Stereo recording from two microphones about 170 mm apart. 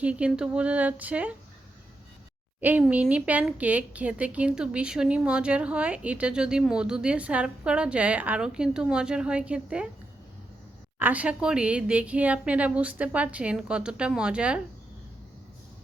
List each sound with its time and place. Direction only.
0.0 s speech: 5° right (ahead or behind)
2.6 s speech: 10° right (ahead or behind)
11.0 s speech: 10° right (ahead or behind)